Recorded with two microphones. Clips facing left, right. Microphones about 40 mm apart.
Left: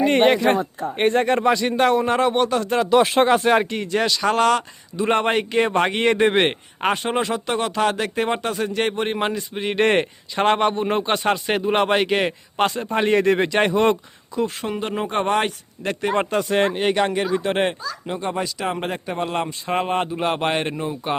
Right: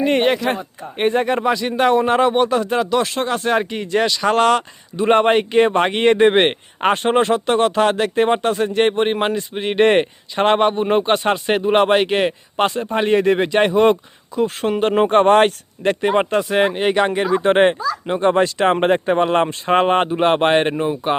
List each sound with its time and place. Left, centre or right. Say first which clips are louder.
0.0 s speech: left 1 dB; centre
1.9 s speech: right 3 dB; centre
3.7 s speech: right 3 dB; centre
4.4 s speech: right 3 dB; right
12.8 s speech: right 2 dB; centre
13.8 s speech: right 4 dB; right
14.4 s speech: right 8 dB; right
16.0 s speech: right 3 dB; right
16.3 s speech: right 3 dB; centre
17.3 s speech: right 7 dB; right
18.3 s speech: right 10 dB; right